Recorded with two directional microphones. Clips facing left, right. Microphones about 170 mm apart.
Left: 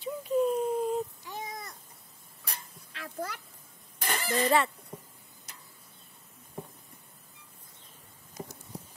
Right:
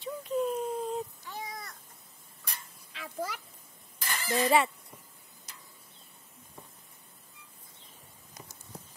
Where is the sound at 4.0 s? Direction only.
60° left (ahead or behind).